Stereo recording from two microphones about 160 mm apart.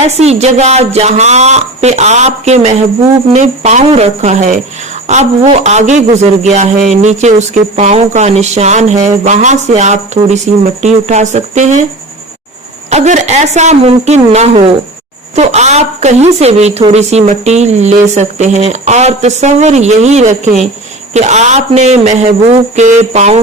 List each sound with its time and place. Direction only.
0.0 s speech: 40° right (ahead or behind)
12.9 s speech: 45° right (ahead or behind)